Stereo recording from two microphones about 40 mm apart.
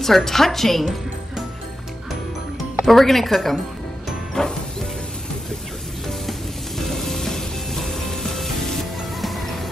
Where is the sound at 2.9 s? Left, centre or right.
Centre.